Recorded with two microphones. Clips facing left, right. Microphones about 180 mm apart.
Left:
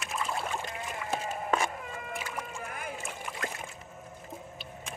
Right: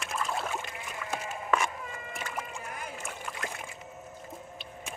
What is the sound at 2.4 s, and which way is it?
Music, 55° left (ahead or behind).